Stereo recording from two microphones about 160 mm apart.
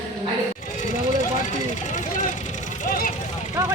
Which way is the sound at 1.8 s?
50° left (ahead or behind).